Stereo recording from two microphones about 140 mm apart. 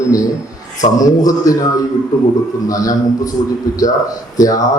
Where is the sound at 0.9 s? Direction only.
25° left (ahead or behind).